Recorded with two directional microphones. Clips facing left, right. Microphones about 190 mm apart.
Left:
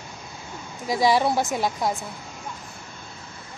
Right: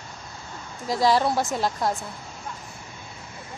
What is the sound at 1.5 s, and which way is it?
Speech, centre (ahead or behind).